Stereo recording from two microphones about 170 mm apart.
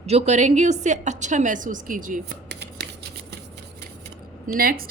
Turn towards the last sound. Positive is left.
turn(degrees=-60)  # may be behind; listen again after turning